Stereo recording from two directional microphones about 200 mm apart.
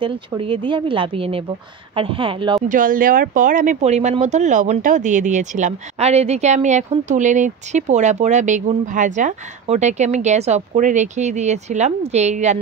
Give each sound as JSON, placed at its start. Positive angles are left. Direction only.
{"t": 0.4, "sound": "speech", "side_deg": -25}
{"t": 2.7, "sound": "speech", "side_deg": -45}